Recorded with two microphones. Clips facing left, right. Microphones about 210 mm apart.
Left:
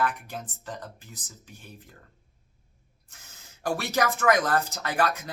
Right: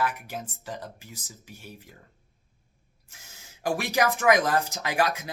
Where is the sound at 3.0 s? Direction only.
10° right (ahead or behind).